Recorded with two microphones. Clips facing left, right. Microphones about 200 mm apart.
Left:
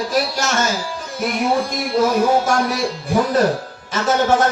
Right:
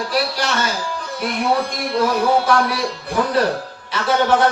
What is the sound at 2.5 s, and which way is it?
Speech, 45° left (ahead or behind).